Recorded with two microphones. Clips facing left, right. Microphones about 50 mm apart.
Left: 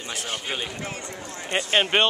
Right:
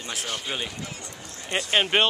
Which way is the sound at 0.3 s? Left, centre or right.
Centre.